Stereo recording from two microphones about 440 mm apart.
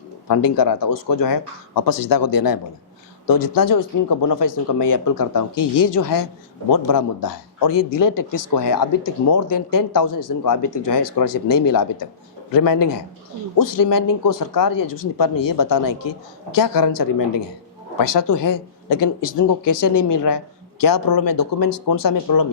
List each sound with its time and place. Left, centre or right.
0.3 s speech: left
19.9 s a woman's voice: left
20.1 s speech: left